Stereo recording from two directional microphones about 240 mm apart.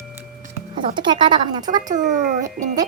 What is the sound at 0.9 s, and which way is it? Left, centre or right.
Speech, centre.